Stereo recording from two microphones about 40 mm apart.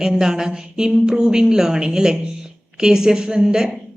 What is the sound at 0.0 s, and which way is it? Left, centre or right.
A woman's voice, centre.